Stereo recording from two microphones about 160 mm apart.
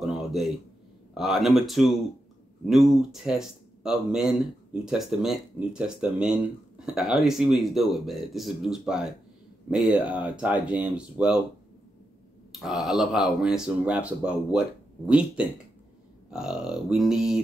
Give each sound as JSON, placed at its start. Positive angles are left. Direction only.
{"t": 0.0, "sound": "a sound", "side_deg": 0}
{"t": 1.1, "sound": "speech", "side_deg": 0}
{"t": 12.5, "sound": "speech", "side_deg": 0}